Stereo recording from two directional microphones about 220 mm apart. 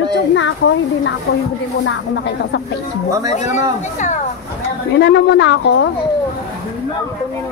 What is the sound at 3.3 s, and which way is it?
Speech, 35° left (ahead or behind).